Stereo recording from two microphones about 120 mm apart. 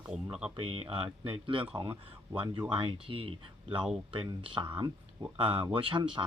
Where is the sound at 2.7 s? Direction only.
45° right (ahead or behind).